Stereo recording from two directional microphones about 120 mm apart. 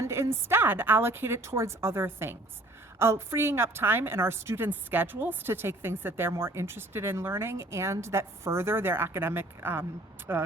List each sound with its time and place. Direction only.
0.0 s a woman's voice: 25° right (ahead or behind)